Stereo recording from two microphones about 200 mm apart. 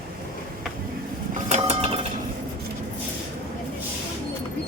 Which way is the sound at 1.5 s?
30° right (ahead or behind).